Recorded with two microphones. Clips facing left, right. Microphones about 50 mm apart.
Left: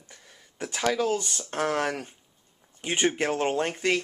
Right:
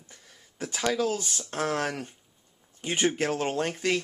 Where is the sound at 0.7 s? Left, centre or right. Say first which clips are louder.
Left 2 dB; centre.